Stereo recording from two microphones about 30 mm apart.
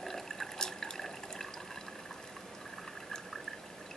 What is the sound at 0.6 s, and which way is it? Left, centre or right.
Water, left.